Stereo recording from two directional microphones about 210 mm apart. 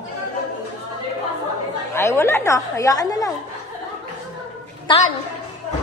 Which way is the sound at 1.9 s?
10° left (ahead or behind).